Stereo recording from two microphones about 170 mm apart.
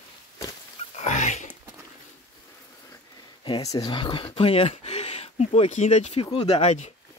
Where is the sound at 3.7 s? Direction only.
25° left (ahead or behind).